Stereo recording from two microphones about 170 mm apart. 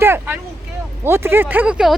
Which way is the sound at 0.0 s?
15° right (ahead or behind).